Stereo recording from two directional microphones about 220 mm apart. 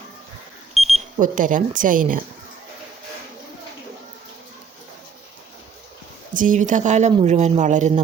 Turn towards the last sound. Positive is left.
turn(degrees=-30)  # may be behind; listen again after turning